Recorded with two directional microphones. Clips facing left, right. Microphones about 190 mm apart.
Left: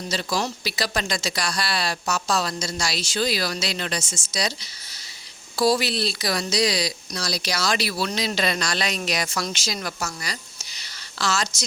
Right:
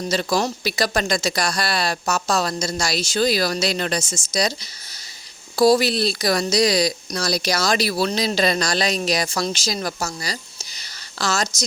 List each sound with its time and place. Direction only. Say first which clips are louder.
0.1 s speech: right 5 dB; 45° right (ahead or behind)